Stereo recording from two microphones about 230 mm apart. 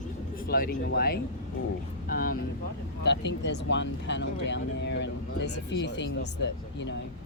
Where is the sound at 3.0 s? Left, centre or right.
Left.